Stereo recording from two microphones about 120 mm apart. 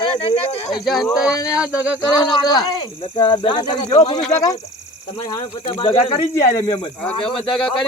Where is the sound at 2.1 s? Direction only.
35° left (ahead or behind).